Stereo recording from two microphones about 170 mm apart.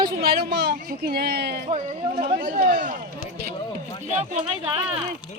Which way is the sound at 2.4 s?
55° right (ahead or behind).